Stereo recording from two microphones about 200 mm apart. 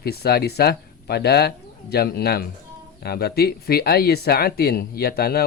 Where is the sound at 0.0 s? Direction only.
50° left (ahead or behind).